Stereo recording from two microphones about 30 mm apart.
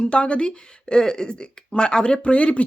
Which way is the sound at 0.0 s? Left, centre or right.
Left.